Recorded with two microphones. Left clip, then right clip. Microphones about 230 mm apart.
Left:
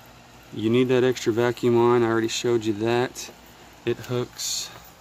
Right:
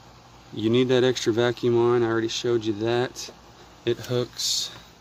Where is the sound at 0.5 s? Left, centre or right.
Centre.